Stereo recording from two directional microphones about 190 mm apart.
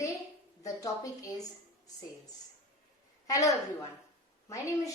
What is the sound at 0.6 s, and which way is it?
Speech, 20° left (ahead or behind).